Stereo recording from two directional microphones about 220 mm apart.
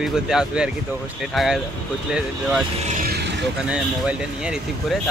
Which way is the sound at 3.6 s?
5° right (ahead or behind).